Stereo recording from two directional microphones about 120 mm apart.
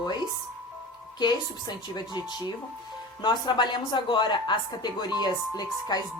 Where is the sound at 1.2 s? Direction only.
35° left (ahead or behind).